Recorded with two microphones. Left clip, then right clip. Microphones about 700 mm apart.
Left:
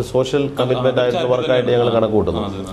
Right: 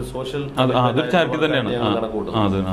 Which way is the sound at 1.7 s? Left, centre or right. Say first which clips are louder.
Left 6 dB; left.